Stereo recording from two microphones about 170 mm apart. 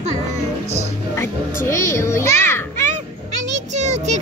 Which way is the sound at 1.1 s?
15° left (ahead or behind).